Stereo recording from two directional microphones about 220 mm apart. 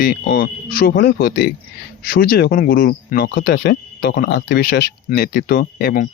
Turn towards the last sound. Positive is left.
turn(degrees=45)  # may be behind; listen again after turning